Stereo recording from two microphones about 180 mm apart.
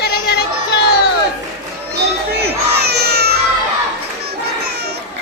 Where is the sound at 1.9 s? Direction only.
65° right (ahead or behind).